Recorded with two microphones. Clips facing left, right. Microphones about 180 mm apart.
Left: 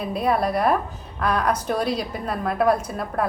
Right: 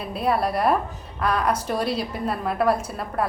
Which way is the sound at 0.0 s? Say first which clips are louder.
Left 1 dB; 5° right (ahead or behind).